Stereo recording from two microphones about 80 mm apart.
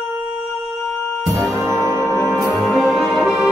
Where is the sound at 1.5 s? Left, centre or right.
Right.